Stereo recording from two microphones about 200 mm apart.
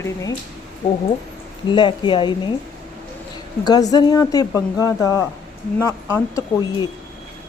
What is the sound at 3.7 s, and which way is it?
A woman's voice, 20° left (ahead or behind).